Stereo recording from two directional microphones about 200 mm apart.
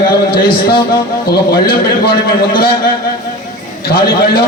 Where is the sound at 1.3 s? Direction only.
50° left (ahead or behind).